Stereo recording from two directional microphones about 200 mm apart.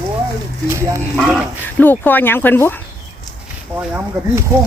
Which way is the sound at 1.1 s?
5° right (ahead or behind).